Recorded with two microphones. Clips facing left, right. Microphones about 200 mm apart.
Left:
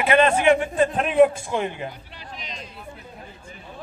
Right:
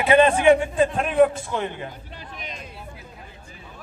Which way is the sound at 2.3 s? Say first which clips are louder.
Even; 55° right (ahead or behind).